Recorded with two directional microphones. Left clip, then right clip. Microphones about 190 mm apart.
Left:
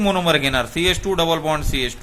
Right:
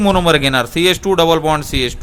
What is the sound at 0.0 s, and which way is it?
A man's voice, 60° right (ahead or behind).